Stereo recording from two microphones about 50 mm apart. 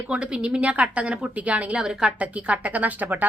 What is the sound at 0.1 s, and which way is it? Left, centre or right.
A woman's voice, centre.